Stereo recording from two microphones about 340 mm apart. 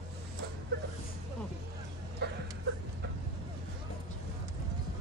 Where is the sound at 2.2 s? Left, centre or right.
Right.